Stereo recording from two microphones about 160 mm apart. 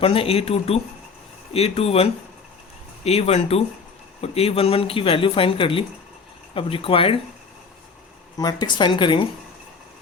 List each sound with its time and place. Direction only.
0.0 s speech: 35° left (ahead or behind)
8.4 s speech: 25° left (ahead or behind)